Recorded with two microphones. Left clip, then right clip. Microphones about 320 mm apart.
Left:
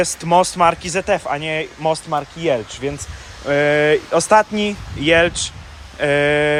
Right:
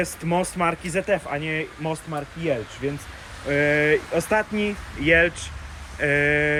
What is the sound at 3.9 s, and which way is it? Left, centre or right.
Speech, centre.